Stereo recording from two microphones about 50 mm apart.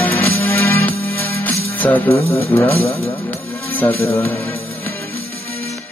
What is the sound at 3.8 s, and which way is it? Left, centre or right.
Mantra, left.